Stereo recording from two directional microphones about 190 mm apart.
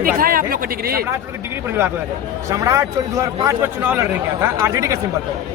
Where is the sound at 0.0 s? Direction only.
50° right (ahead or behind).